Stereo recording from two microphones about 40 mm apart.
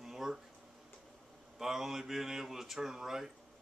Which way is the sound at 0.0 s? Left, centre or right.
Centre.